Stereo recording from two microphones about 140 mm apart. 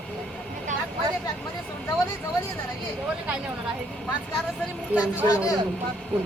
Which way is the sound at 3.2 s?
10° right (ahead or behind).